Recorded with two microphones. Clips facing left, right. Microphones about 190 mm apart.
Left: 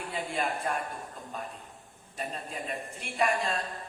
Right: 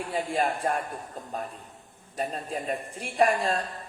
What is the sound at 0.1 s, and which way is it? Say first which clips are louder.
Speech: right 5 dB; 45° right (ahead or behind).